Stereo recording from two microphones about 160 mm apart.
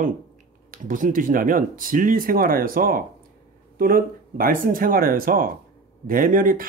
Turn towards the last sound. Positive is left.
turn(degrees=-60)  # may be behind; listen again after turning